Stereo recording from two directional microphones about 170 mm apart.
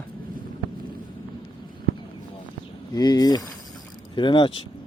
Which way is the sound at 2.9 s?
25° left (ahead or behind).